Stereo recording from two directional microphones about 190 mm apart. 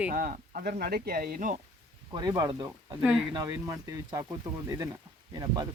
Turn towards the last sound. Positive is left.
turn(degrees=-20)  # may be behind; listen again after turning